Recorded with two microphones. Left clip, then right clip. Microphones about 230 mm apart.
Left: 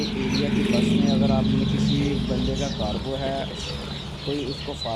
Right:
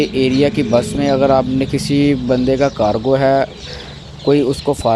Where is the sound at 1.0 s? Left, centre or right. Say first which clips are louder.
Right 11 dB; right.